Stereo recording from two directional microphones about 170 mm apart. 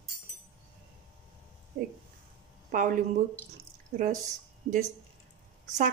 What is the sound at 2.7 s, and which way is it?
Speech, 50° right (ahead or behind).